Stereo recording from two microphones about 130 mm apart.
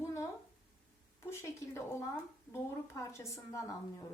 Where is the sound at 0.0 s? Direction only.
20° left (ahead or behind).